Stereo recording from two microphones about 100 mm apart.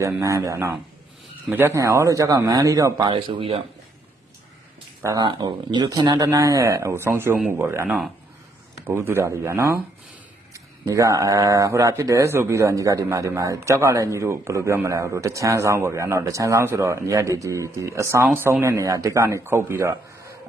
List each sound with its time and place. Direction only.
0.0 s speech: 30° right (ahead or behind)
1.7 s speech: 30° right (ahead or behind)
3.0 s speech: 55° right (ahead or behind)
5.2 s speech: 50° right (ahead or behind); by 7.3 s 25° right (ahead or behind)
7.3 s speech: 15° right (ahead or behind)
8.9 s speech: 25° right (ahead or behind)